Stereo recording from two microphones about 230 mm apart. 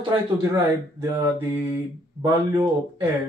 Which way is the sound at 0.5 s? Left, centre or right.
Centre.